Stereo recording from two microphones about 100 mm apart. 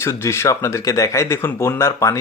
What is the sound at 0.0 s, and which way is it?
Speech, 25° left (ahead or behind).